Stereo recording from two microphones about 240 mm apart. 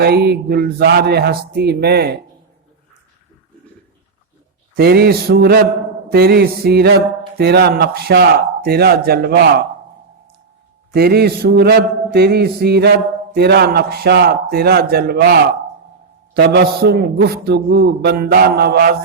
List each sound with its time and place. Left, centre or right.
0.0 s speech: right
4.8 s speech: right
10.9 s speech: right